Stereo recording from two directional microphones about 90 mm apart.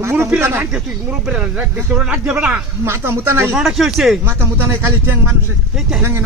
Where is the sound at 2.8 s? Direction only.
25° right (ahead or behind).